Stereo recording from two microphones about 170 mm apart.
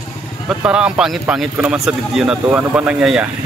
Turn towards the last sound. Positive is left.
turn(degrees=-5)  # may be behind; listen again after turning